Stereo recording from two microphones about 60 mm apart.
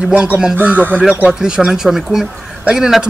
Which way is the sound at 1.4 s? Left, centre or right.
Centre.